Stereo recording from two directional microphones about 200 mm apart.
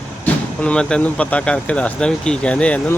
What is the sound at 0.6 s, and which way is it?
Speech, 5° left (ahead or behind).